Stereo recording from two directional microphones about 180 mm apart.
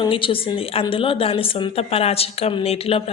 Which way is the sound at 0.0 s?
30° left (ahead or behind).